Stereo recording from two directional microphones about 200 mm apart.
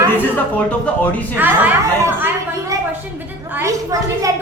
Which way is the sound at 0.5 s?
5° left (ahead or behind).